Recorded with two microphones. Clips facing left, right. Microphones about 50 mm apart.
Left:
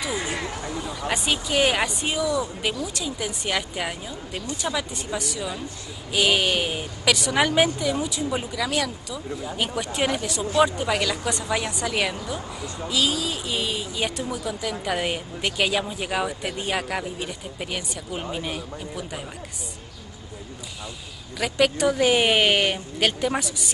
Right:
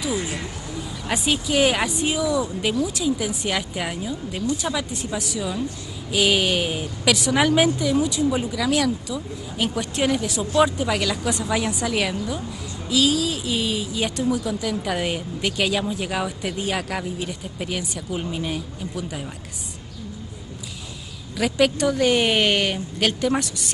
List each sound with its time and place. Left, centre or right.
1.0 s speech: centre
21.4 s speech: centre